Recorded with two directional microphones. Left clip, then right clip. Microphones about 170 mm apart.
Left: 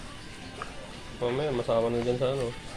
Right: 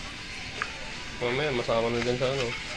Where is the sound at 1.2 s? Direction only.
5° left (ahead or behind).